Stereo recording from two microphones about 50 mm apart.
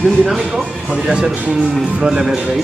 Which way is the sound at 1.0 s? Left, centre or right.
Centre.